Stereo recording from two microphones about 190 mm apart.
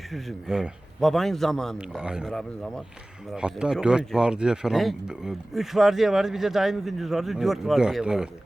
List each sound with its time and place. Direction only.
0.1 s speech: centre (ahead or behind)